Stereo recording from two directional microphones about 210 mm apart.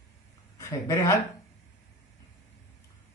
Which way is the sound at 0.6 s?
15° left (ahead or behind).